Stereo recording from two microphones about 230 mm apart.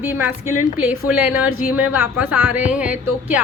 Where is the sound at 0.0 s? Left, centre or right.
Centre.